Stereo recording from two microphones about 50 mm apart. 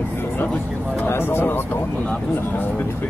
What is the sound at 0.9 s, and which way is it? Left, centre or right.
Speech, left.